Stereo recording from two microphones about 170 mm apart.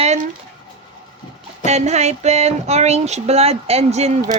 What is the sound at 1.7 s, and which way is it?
Speech, 40° right (ahead or behind).